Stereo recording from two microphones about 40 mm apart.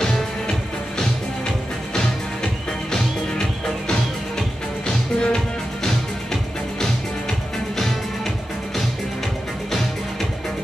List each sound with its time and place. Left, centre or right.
2.9 s music: centre
6.8 s music: centre